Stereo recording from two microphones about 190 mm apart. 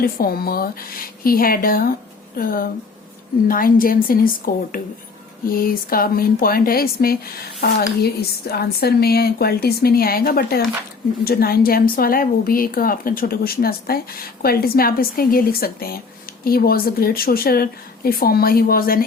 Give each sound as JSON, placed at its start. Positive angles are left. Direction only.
{"t": 0.0, "sound": "speech", "side_deg": 50}